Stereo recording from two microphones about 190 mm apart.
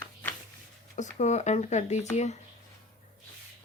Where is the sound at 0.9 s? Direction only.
35° left (ahead or behind).